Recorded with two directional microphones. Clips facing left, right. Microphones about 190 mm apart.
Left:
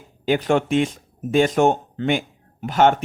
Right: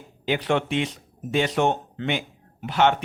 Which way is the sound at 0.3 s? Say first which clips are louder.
Left 5 dB; 45° left (ahead or behind).